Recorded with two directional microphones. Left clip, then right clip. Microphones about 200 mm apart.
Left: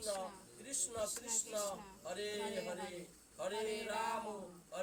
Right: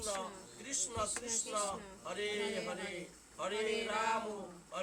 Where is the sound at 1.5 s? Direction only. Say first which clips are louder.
Right 3 dB; 10° right (ahead or behind).